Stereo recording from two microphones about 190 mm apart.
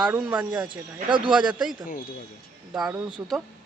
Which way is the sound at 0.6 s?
25° right (ahead or behind).